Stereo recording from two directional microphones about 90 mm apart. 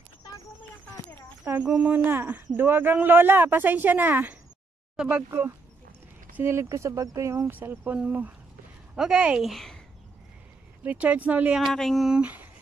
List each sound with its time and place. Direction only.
1.5 s a woman's voice: 15° right (ahead or behind)
5.3 s a woman's voice: 25° right (ahead or behind); by 9.8 s centre (ahead or behind)
10.8 s speech: 15° right (ahead or behind)
11.6 s speech: 5° left (ahead or behind)
12.1 s speech: 15° right (ahead or behind)